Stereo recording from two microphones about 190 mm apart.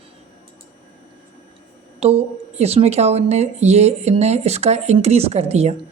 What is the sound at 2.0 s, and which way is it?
Speech, 30° right (ahead or behind).